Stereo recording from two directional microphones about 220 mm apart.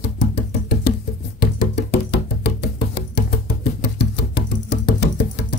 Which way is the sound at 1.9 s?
50° left (ahead or behind).